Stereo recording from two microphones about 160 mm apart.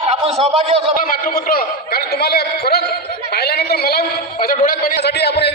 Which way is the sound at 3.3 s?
85° left.